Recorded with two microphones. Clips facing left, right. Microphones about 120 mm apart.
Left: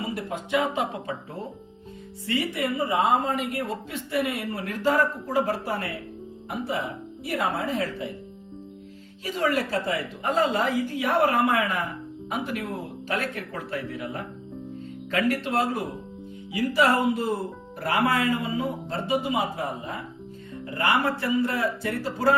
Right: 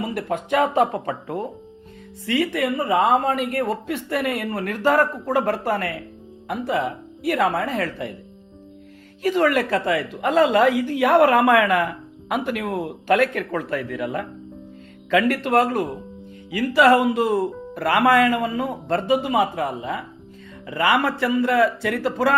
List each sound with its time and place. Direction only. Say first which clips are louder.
0.0 s speech: right 5 dB; 60° right (ahead or behind)
2.2 s a woman's voice: right 5 dB; 90° right; by 3.6 s 70° right (ahead or behind)
3.6 s speech: right 7 dB; 55° right (ahead or behind)
6.5 s a woman's voice: right 6 dB; 85° right; by 8.1 s 65° right (ahead or behind)
9.2 s a woman's voice: right 7 dB; 70° right (ahead or behind); by 14.3 s 90° right
15.1 s speech: right 6 dB; 80° right; by 15.8 s 60° right (ahead or behind)
16.5 s a man's voice: right 6 dB; 90° right